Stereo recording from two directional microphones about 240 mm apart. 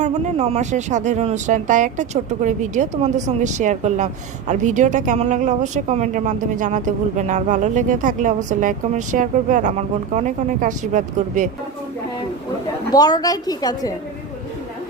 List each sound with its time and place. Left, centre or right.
0.0 s speech: right
12.9 s a woman's voice: centre